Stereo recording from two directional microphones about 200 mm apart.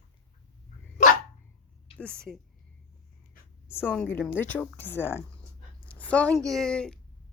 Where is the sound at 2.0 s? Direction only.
5° left (ahead or behind).